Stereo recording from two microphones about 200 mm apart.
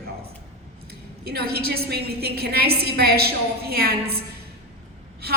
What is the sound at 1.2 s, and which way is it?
A woman's voice, 50° right (ahead or behind).